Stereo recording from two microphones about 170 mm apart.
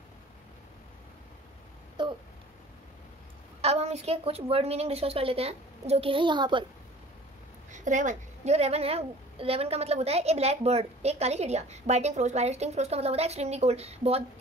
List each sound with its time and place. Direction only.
2.0 s a sound: 30° right (ahead or behind)
3.6 s a woman's voice: 40° right (ahead or behind)
7.7 s a woman's voice: 45° right (ahead or behind)